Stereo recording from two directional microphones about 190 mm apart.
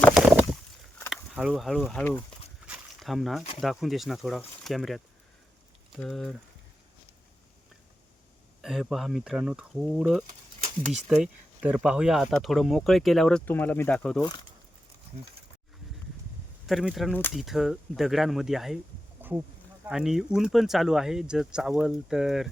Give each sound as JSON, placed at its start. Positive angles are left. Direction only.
{"t": 0.0, "sound": "a sound", "side_deg": 0}
{"t": 1.1, "sound": "speech", "side_deg": -5}
{"t": 2.6, "sound": "a sound", "side_deg": -5}
{"t": 3.6, "sound": "speech", "side_deg": 0}
{"t": 8.6, "sound": "speech", "side_deg": 0}
{"t": 14.2, "sound": "speech", "side_deg": 20}
{"t": 16.6, "sound": "speech", "side_deg": 0}
{"t": 19.8, "sound": "speech", "side_deg": -5}